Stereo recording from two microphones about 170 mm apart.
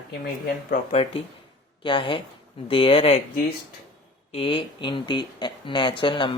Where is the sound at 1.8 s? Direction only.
30° left (ahead or behind).